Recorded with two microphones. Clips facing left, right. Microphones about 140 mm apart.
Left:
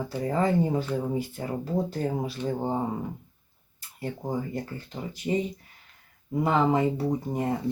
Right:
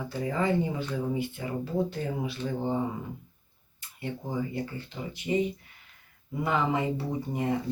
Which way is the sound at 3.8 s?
40° left (ahead or behind).